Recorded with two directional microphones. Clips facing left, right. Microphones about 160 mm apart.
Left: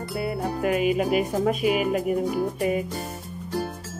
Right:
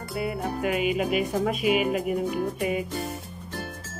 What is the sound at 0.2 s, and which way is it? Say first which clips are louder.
Music: left 1 dB; 35° left (ahead or behind).